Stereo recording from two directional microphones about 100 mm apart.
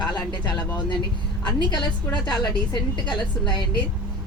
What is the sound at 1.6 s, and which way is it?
A woman's voice, 45° left (ahead or behind).